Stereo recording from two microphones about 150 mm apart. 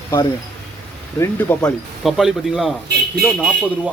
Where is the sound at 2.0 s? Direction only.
Centre (ahead or behind).